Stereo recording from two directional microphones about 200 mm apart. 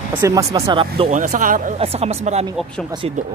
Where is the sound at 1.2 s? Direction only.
40° right (ahead or behind).